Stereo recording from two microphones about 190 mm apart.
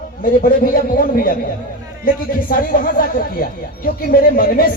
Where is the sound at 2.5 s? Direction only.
50° left (ahead or behind).